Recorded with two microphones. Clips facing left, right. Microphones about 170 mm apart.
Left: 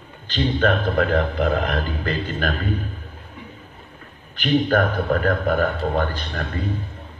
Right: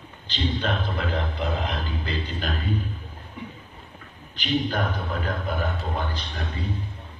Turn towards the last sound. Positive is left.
turn(degrees=55)  # may be behind; listen again after turning